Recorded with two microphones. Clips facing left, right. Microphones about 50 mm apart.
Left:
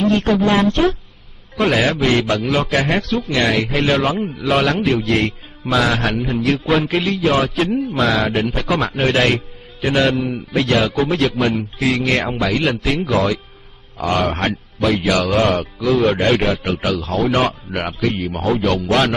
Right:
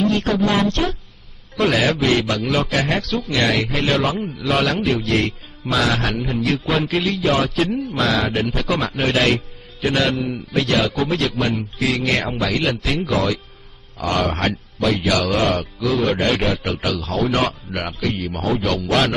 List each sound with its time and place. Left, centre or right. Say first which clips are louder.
0.0 s a man's voice: left 3 dB; centre
14.2 s a man's voice: left 2 dB; centre
17.6 s speech: left 3 dB; centre
18.4 s a man's voice: left 3 dB; centre